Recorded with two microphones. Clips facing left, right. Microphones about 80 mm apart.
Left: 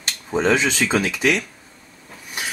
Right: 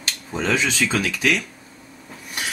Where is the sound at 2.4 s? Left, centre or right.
Centre.